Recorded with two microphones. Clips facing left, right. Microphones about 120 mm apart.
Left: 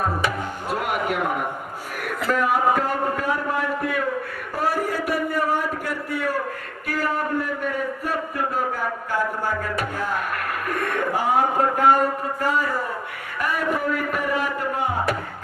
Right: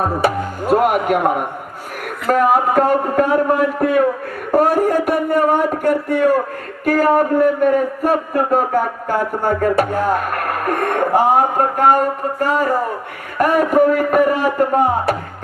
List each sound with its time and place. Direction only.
0.2 s music: 45° right (ahead or behind)
2.2 s a man's voice: 45° right (ahead or behind)
4.5 s a sound: 45° right (ahead or behind)
6.8 s a man's voice: 45° right (ahead or behind)